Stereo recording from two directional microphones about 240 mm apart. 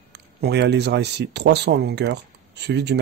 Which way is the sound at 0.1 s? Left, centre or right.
Right.